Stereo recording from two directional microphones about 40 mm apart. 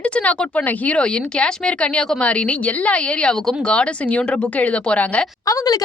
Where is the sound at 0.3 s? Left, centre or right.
Left.